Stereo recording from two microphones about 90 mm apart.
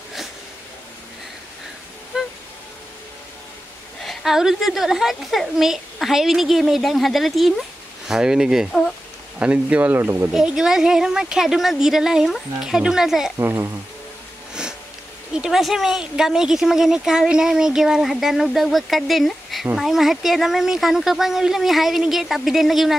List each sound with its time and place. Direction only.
4.0 s speech: centre (ahead or behind)
9.4 s speech: 15° right (ahead or behind)
10.3 s speech: 5° right (ahead or behind)
13.4 s speech: 25° right (ahead or behind)
14.5 s sniff: 10° right (ahead or behind)
15.3 s speech: 5° right (ahead or behind)